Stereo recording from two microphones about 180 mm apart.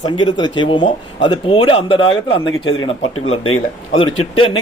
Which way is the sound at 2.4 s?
90° left.